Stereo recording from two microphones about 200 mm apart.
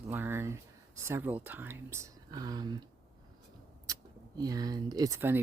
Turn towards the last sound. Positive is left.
turn(degrees=-15)  # may be behind; listen again after turning